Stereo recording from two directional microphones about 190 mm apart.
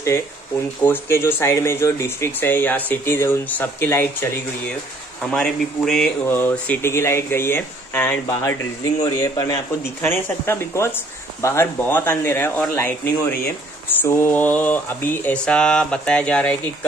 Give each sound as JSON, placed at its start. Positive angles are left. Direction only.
{"t": 0.8, "sound": "speech", "side_deg": 15}